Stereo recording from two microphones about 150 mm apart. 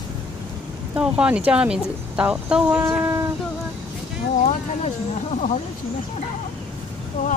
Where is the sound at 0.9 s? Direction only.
5° right (ahead or behind).